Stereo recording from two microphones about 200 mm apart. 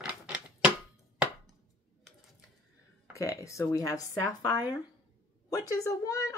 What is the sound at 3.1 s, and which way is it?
Speech, 15° left (ahead or behind).